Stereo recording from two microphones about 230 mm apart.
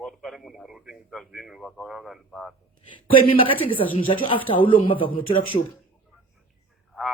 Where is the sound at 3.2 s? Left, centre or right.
Left.